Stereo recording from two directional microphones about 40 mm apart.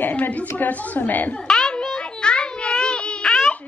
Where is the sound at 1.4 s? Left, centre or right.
Centre.